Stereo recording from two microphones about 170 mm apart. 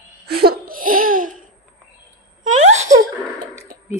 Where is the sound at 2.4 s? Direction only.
45° right (ahead or behind).